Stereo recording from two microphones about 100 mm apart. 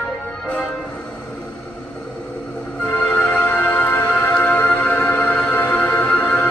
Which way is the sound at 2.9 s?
15° left (ahead or behind).